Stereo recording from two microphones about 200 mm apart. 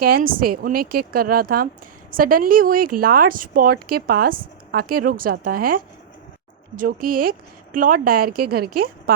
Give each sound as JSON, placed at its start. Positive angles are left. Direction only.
{"t": 0.0, "sound": "speech", "side_deg": -45}